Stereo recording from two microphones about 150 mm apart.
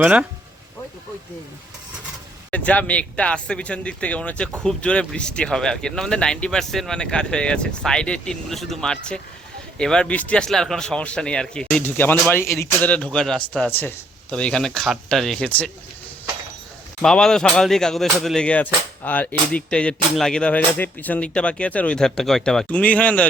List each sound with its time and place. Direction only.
0.0 s speech: 10° right (ahead or behind)
2.5 s speech: 10° left (ahead or behind)
13.1 s speech: 5° left (ahead or behind)
17.0 s speech: 5° left (ahead or behind)